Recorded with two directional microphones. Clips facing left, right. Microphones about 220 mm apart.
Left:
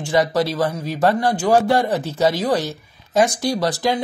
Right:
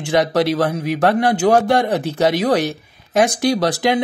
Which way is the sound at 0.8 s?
70° right (ahead or behind).